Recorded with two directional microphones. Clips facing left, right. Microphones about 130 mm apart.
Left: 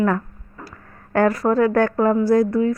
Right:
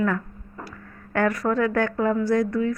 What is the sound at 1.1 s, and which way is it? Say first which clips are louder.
Speech: left 5 dB; 35° left (ahead or behind).